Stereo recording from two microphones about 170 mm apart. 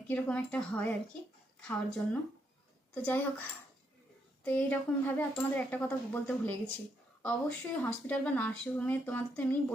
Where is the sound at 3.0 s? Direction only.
10° left (ahead or behind).